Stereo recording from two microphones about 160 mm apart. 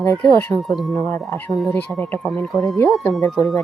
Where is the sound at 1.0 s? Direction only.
15° left (ahead or behind).